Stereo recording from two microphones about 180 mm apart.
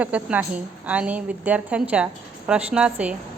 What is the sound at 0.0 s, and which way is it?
A woman's voice, 10° right (ahead or behind).